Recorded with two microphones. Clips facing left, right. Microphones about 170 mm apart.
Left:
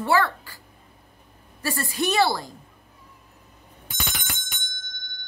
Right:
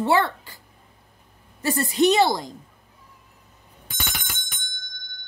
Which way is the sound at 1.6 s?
20° right (ahead or behind).